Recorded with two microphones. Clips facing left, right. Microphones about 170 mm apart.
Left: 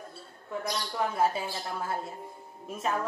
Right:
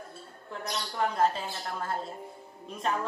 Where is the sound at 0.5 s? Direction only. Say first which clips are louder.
Left 3 dB; 5° left (ahead or behind).